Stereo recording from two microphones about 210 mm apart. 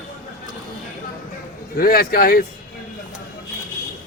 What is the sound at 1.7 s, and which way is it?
Speech, 45° left (ahead or behind).